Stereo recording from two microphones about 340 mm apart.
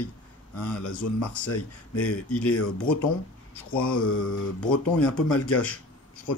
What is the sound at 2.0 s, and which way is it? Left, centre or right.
Speech, centre.